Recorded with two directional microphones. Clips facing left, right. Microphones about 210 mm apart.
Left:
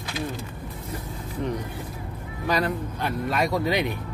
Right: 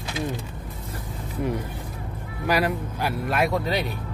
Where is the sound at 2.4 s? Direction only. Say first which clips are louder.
Right 2 dB; 10° right (ahead or behind).